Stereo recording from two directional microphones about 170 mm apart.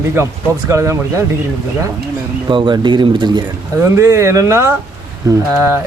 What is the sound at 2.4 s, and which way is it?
Speech, 30° right (ahead or behind).